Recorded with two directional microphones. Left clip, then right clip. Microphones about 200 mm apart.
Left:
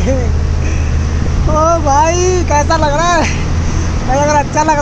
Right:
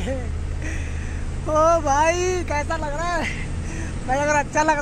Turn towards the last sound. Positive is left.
turn(degrees=-15)  # may be behind; listen again after turning